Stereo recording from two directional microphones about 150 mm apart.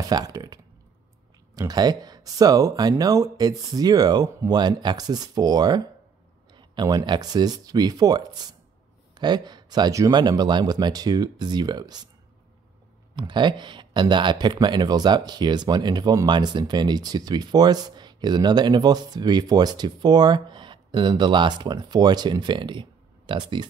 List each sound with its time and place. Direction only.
0.1 s speech: 25° right (ahead or behind)
13.1 s speech: 30° right (ahead or behind)